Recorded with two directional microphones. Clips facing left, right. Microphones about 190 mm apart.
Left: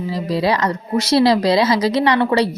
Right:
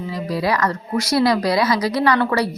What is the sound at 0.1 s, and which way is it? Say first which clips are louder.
Speech: left 3 dB; 25° left (ahead or behind).